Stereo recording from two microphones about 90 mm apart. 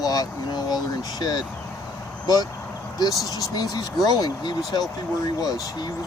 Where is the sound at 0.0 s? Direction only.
45° left (ahead or behind).